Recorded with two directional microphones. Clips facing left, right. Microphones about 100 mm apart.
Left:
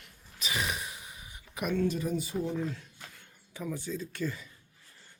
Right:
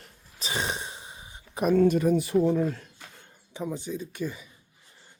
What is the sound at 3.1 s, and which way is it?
Speech, 25° right (ahead or behind).